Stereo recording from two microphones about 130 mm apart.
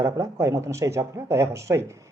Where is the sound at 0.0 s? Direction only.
25° right (ahead or behind).